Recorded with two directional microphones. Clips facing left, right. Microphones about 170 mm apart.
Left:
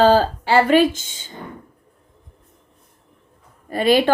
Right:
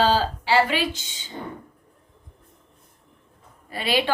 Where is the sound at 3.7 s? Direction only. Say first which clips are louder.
Left 8 dB; 45° left (ahead or behind).